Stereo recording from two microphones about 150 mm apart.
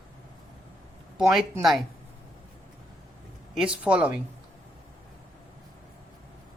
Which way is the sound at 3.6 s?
5° right (ahead or behind).